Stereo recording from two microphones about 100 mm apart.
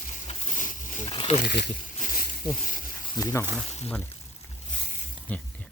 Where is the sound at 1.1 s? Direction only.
60° left (ahead or behind).